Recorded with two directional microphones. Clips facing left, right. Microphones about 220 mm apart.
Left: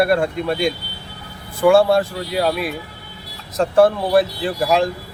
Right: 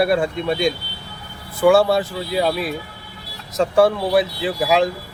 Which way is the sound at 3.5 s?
Centre (ahead or behind).